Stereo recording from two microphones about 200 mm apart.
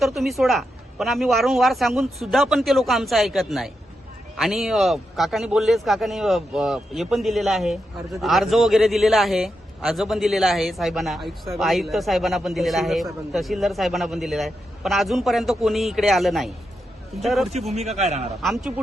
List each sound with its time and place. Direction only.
0.0 s speech: centre (ahead or behind)
17.7 s a man's voice: 35° right (ahead or behind)
18.4 s speech: centre (ahead or behind)